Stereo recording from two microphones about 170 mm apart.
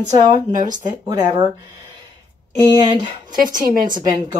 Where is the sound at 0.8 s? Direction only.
25° right (ahead or behind).